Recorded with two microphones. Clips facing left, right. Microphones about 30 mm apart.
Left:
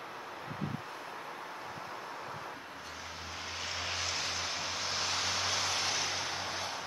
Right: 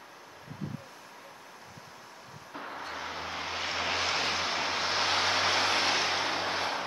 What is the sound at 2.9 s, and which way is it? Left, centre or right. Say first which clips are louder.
Vehicle: right 7 dB; right.